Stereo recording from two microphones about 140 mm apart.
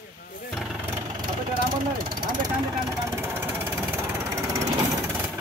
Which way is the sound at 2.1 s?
25° right (ahead or behind).